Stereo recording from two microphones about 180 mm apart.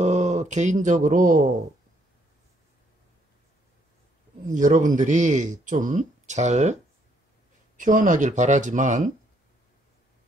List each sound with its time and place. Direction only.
0.0 s speech: 40° right (ahead or behind)
4.6 s speech: 45° right (ahead or behind)